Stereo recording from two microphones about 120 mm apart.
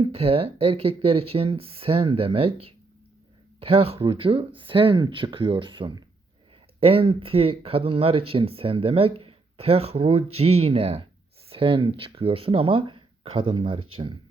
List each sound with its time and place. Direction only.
0.0 s speech: 55° right (ahead or behind)